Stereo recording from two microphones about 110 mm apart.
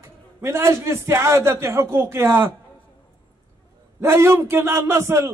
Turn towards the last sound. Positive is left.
turn(degrees=-25)  # may be behind; listen again after turning